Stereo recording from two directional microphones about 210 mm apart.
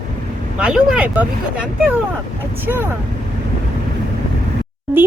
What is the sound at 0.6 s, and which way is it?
A woman's voice, 5° right (ahead or behind).